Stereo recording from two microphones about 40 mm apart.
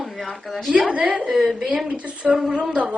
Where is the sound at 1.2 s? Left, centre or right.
Centre.